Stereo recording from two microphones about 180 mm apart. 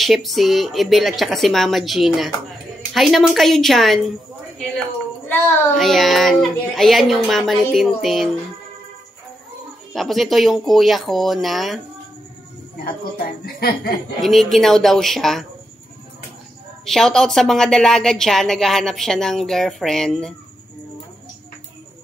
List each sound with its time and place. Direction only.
0.0 s a woman's voice: centre (ahead or behind)
5.8 s a woman's voice: centre (ahead or behind)
9.9 s a woman's voice: centre (ahead or behind)
12.8 s a woman's voice: 55° left (ahead or behind)
14.2 s a woman's voice: centre (ahead or behind)
16.8 s a woman's voice: centre (ahead or behind)